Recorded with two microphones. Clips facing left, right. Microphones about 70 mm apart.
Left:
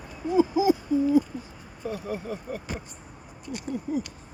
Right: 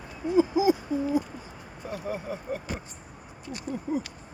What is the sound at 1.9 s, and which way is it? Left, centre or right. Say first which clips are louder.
Speech: right 1 dB; right.